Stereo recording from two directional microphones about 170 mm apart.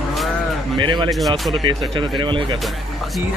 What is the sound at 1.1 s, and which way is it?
Speech, centre (ahead or behind).